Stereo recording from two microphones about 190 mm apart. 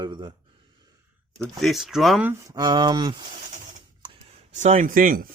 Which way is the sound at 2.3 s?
15° right (ahead or behind).